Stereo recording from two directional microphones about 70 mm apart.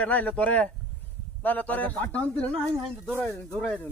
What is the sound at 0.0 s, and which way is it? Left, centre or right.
A man's voice, left.